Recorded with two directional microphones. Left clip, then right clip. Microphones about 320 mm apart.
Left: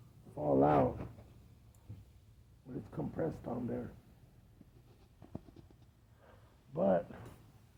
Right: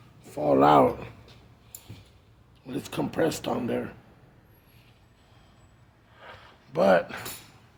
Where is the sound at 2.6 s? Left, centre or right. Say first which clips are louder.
Right 12 dB; right.